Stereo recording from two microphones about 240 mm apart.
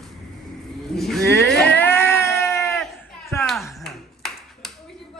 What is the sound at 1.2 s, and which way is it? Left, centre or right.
Speech, right.